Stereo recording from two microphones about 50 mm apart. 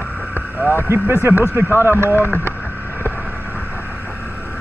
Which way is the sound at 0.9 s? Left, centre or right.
Right.